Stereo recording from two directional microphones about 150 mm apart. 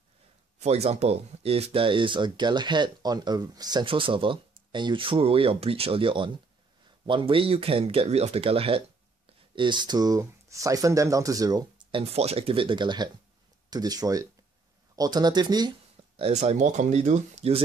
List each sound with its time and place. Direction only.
0.6 s speech: 45° right (ahead or behind); by 12.0 s 25° right (ahead or behind)
12.0 s speech: 45° right (ahead or behind)
16.2 s speech: 45° right (ahead or behind)